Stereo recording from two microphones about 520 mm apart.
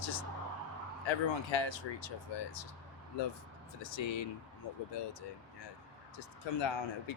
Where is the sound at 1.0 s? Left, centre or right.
Left.